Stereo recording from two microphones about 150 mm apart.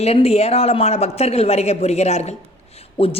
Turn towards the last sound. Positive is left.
turn(degrees=40)  # may be behind; listen again after turning